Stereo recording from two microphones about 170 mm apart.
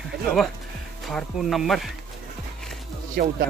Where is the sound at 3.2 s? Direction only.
70° right (ahead or behind).